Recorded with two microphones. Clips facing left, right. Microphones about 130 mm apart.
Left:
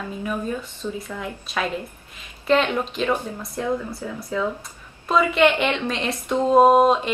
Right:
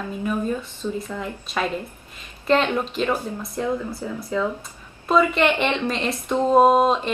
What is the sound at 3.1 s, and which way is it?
Speech, 10° right (ahead or behind).